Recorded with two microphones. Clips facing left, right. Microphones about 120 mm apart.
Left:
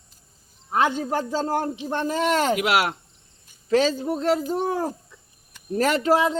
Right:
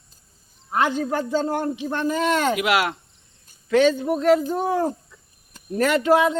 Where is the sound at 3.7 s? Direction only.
30° left (ahead or behind).